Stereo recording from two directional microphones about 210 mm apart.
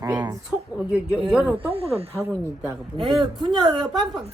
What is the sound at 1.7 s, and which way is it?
Speech, 30° right (ahead or behind).